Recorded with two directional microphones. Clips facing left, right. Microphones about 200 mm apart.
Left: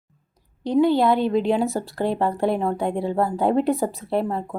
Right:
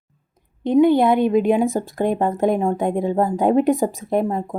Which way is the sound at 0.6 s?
20° right (ahead or behind).